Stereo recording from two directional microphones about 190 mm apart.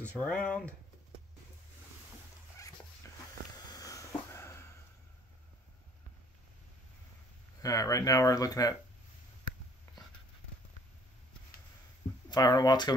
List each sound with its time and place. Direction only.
0.2 s speech: 5° left (ahead or behind)
3.7 s a sound: 20° left (ahead or behind)
7.6 s speech: 20° left (ahead or behind)
9.9 s whispering: 15° left (ahead or behind)
12.3 s speech: 20° left (ahead or behind)